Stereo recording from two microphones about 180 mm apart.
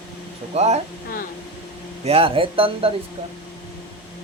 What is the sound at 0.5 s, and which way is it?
Speech, 35° right (ahead or behind).